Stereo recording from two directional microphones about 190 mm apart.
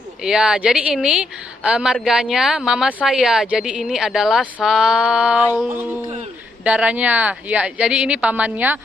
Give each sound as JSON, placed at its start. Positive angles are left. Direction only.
{"t": 0.2, "sound": "a woman's voice", "side_deg": -5}